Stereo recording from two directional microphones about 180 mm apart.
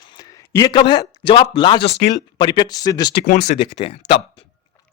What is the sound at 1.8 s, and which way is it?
Speech, 65° left (ahead or behind).